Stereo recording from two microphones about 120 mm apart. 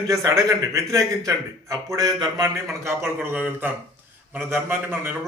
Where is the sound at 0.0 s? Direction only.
25° right (ahead or behind).